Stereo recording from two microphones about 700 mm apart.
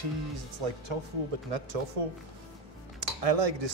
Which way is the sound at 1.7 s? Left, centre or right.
Right.